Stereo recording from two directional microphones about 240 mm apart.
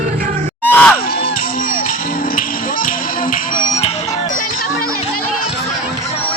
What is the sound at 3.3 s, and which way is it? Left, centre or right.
Music, left.